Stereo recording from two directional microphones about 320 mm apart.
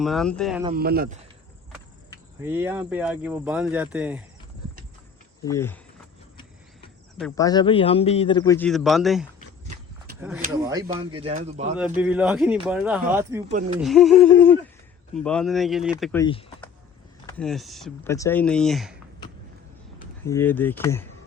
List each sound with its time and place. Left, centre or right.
0.0 s speech: centre
0.7 s speech: right
2.4 s speech: centre
5.5 s a man's voice: centre
7.2 s a man's voice: centre; by 11.8 s right
11.9 s speech: centre
13.5 s speech: right
13.7 s speech: centre
17.2 s speech: centre
20.2 s a man's voice: centre